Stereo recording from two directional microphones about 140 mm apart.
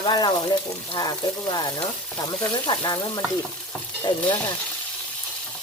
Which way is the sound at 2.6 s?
30° left (ahead or behind).